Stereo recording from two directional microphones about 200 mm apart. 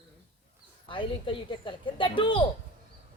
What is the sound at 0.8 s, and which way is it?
A woman's voice, 25° left (ahead or behind).